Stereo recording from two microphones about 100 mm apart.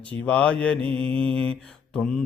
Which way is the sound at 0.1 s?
15° left (ahead or behind).